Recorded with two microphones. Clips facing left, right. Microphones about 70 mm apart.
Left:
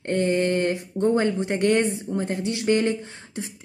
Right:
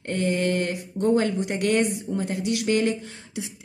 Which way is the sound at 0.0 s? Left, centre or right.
Left.